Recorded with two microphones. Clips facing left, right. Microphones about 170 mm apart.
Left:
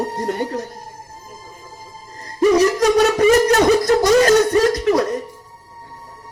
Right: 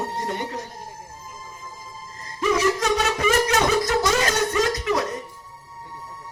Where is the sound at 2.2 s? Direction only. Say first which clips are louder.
Left 7 dB; 40° left (ahead or behind).